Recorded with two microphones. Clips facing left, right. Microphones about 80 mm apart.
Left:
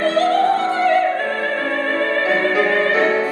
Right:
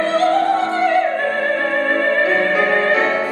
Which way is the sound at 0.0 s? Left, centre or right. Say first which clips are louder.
Even; right.